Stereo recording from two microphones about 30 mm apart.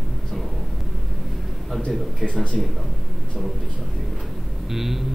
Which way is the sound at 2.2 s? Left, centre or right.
Left.